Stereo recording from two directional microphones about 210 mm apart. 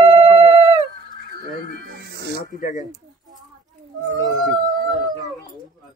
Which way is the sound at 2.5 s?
40° left (ahead or behind).